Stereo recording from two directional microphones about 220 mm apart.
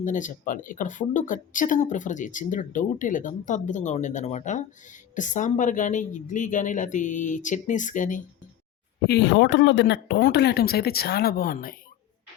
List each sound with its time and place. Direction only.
0.0 s speech: 35° left (ahead or behind)
9.0 s speech: 50° left (ahead or behind)